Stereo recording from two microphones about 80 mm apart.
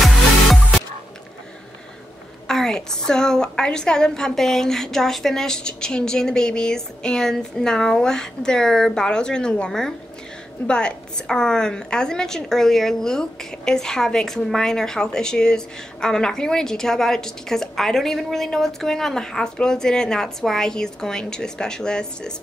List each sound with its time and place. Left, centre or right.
2.4 s a woman's voice: centre